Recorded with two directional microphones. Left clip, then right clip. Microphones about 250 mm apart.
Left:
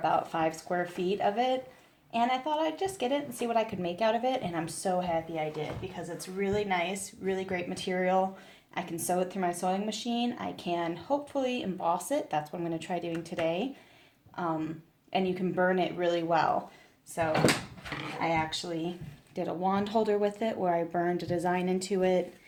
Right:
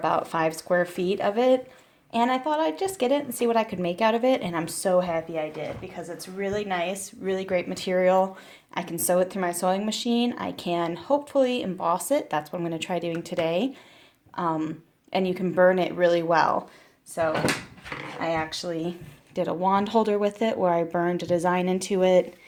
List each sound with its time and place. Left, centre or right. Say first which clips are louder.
0.0 s speech: right 4 dB; right
18.2 s speech: right 2 dB; right